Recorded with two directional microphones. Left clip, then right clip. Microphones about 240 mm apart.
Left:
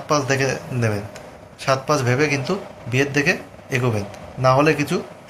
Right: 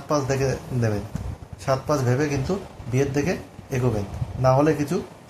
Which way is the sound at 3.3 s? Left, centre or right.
Centre.